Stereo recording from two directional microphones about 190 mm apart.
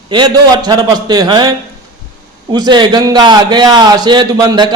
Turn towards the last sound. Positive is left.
turn(degrees=-20)  # may be behind; listen again after turning